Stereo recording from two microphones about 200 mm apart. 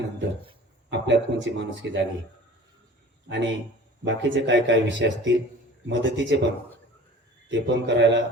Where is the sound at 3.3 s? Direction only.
65° right (ahead or behind).